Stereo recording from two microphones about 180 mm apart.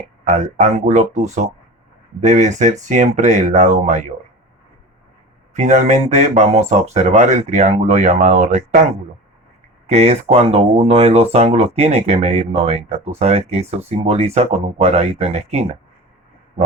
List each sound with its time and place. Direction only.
0.3 s speech: 40° right (ahead or behind)
5.5 s speech: 40° right (ahead or behind)
9.8 s speech: 35° right (ahead or behind)